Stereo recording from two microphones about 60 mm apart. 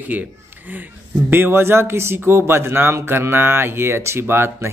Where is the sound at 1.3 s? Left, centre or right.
Right.